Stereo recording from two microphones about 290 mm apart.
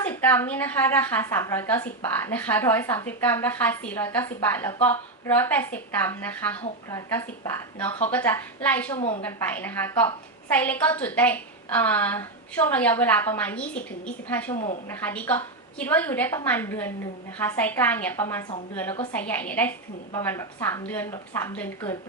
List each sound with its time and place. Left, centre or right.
0.1 s a woman's voice: centre
9.0 s a woman's voice: left
9.2 s a woman's voice: centre
14.5 s a woman's voice: left
14.8 s a woman's voice: centre